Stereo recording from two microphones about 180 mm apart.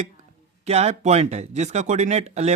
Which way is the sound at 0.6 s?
35° right (ahead or behind).